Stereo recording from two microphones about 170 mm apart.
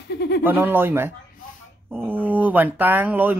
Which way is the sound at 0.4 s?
10° right (ahead or behind).